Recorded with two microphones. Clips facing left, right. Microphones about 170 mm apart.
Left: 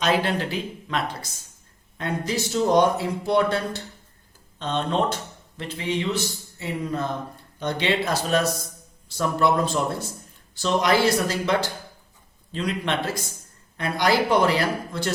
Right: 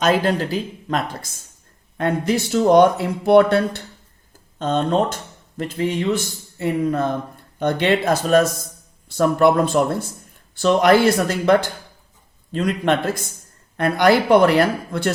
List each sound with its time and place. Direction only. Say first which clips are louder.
0.0 s speech: right 5 dB; 45° right (ahead or behind)
2.0 s speech: right 7 dB; 60° right (ahead or behind)
4.5 s speech: right 6 dB; 45° right (ahead or behind)